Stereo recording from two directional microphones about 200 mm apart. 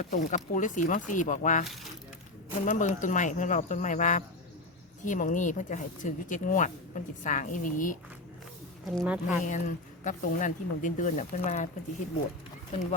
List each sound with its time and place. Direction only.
0.0 s speech: 40° left (ahead or behind)
2.6 s speech: 40° left (ahead or behind)
8.8 s speech: centre (ahead or behind)
9.4 s speech: 40° left (ahead or behind)